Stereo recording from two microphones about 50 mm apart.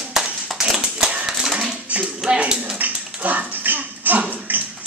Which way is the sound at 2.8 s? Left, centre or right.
Right.